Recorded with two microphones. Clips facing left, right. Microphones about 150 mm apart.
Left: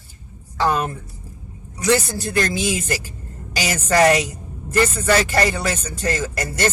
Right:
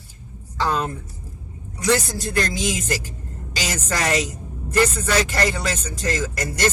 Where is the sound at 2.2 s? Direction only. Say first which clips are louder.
Left 2 dB; 60° left (ahead or behind).